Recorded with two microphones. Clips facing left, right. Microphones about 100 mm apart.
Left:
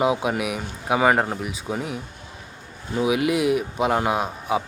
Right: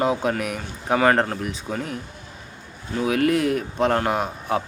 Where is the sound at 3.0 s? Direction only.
10° left (ahead or behind).